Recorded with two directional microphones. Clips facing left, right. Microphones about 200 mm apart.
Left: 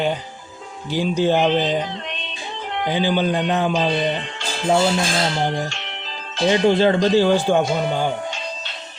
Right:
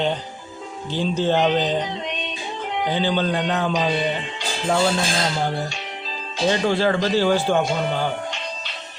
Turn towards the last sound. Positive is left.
turn(degrees=15)  # may be behind; listen again after turning